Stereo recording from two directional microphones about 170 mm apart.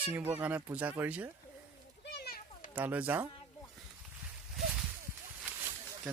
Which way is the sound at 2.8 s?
10° right (ahead or behind).